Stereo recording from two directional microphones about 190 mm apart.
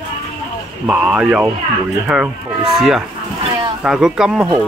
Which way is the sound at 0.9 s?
5° right (ahead or behind).